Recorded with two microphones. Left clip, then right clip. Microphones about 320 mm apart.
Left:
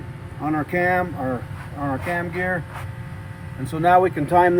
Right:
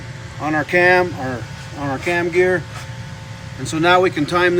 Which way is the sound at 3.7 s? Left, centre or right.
Centre.